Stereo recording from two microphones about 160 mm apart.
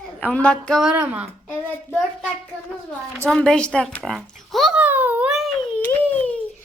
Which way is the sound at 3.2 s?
5° left (ahead or behind).